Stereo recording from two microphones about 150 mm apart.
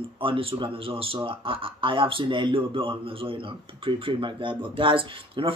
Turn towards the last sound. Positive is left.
turn(degrees=-35)  # may be behind; listen again after turning